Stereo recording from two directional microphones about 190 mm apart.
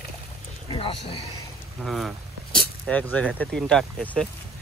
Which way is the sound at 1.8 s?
Centre (ahead or behind).